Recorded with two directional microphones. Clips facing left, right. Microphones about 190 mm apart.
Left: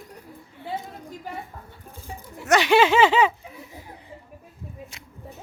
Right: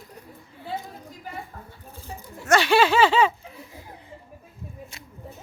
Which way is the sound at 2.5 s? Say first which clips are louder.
Left 1 dB; 20° left (ahead or behind).